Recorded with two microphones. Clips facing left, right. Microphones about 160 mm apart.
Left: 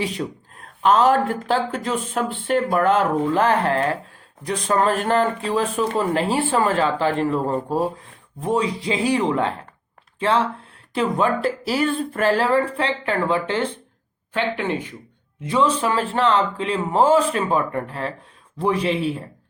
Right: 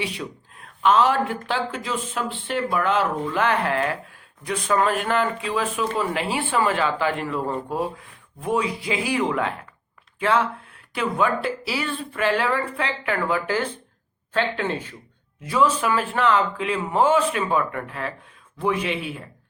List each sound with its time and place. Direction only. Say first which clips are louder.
0.1 s speech: left 5 dB; 40° left (ahead or behind)
11.4 s speech: left 6 dB; 45° left (ahead or behind)